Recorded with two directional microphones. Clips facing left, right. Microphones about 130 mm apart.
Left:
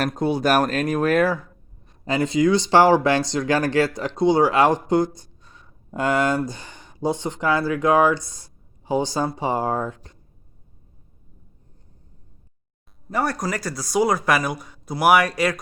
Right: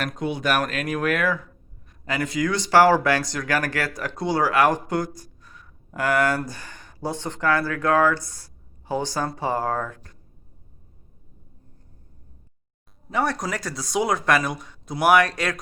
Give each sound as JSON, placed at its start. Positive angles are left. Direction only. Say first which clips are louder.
{"t": 0.0, "sound": "speech", "louder": "left 5 dB", "side_deg": 35}
{"t": 13.1, "sound": "speech", "louder": "left 1 dB", "side_deg": 0}